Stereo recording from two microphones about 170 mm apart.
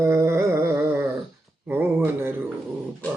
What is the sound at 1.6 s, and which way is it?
Speech, 15° right (ahead or behind).